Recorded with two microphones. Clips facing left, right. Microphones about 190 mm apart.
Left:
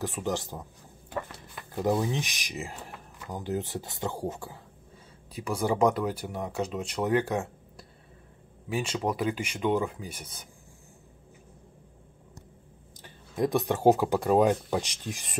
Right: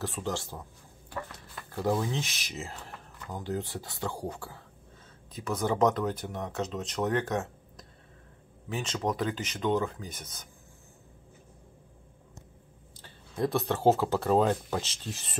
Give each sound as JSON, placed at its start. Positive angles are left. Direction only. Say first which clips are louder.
{"t": 0.0, "sound": "speech", "louder": "left 3 dB", "side_deg": 15}
{"t": 13.0, "sound": "speech", "louder": "left 2 dB", "side_deg": 15}